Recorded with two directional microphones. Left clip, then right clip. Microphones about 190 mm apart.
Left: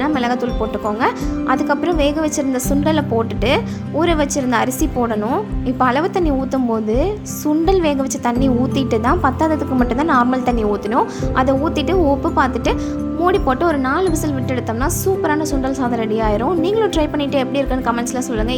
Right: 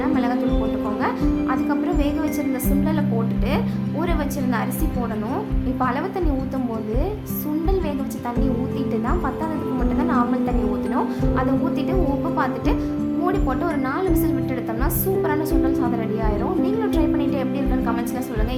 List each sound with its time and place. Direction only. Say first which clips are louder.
0.0 s music: left 4 dB; 40° left (ahead or behind)
1.0 s a woman's voice: left 4 dB; 40° left (ahead or behind)
4.0 s a woman's voice: left 9 dB; 35° left (ahead or behind)
7.6 s a woman's voice: left 10 dB; 40° left (ahead or behind)
13.2 s a woman's voice: left 9 dB; 40° left (ahead or behind)